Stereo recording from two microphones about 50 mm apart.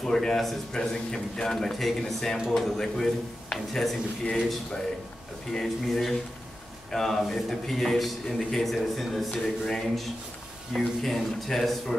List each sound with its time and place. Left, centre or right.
0.0 s a man's voice: centre
5.5 s a man's voice: centre